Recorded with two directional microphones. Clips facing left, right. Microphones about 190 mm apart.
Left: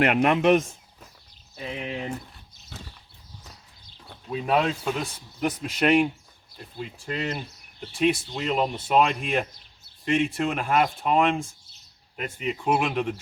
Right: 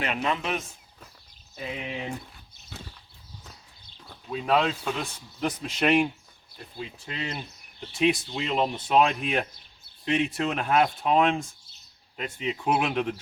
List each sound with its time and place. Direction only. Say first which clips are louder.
0.0 s speech: left 9 dB; 65° left (ahead or behind)
1.8 s speech: left 4 dB; centre (ahead or behind)
4.3 s speech: left 1 dB; 10° left (ahead or behind)